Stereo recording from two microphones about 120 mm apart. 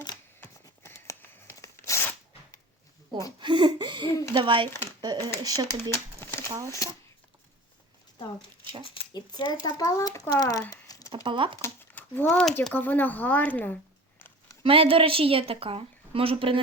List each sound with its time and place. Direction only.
0.6 s tearing: 25° left (ahead or behind)
3.4 s a woman's voice: 40° right (ahead or behind)
4.7 s speech: 20° left (ahead or behind)
5.4 s speech: 30° right (ahead or behind)
6.1 s a sound: 20° left (ahead or behind)
6.7 s speech: 30° left (ahead or behind)
8.8 s a child's voice: 40° left (ahead or behind)
10.7 s a sound: 30° left (ahead or behind)
11.1 s speech: 45° right (ahead or behind)
11.6 s a sound: 15° left (ahead or behind)
12.7 s speech: 15° left (ahead or behind)
14.6 s a woman's voice: 50° right (ahead or behind)